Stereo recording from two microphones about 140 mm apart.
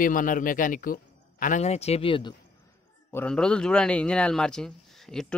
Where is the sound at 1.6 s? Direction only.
50° left (ahead or behind).